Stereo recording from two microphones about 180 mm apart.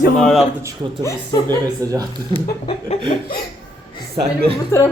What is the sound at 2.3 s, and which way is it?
Chuckle, 30° left (ahead or behind).